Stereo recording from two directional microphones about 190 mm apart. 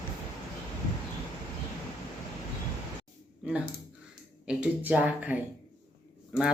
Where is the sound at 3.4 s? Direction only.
5° right (ahead or behind).